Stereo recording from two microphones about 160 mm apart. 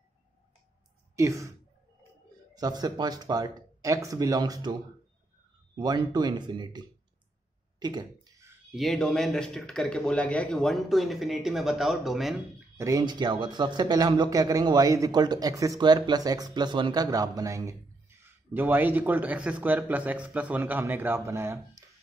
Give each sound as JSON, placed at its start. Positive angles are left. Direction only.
{"t": 1.1, "sound": "speech", "side_deg": -20}
{"t": 2.5, "sound": "a man's voice", "side_deg": -25}
{"t": 5.8, "sound": "a man's voice", "side_deg": -25}
{"t": 7.8, "sound": "a sound", "side_deg": -25}
{"t": 8.7, "sound": "a man's voice", "side_deg": 0}
{"t": 12.7, "sound": "a man's voice", "side_deg": -20}